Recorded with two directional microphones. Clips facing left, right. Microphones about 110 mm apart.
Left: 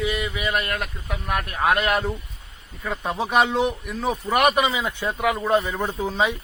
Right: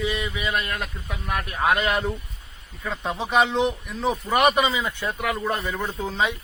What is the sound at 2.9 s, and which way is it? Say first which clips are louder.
A man's voice: left 1 dB; 15° left (ahead or behind).